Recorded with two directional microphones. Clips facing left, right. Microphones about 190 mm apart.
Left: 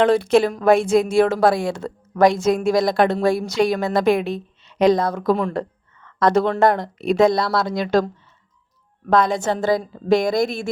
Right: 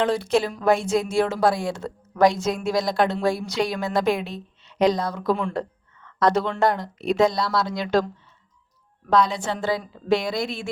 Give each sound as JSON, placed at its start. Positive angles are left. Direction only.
{"t": 0.0, "sound": "a woman's voice", "side_deg": 55}